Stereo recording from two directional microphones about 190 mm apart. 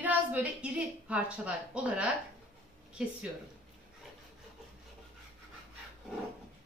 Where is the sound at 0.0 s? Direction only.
10° right (ahead or behind).